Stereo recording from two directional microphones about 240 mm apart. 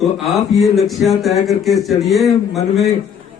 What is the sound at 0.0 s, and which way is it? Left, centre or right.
Speech, centre.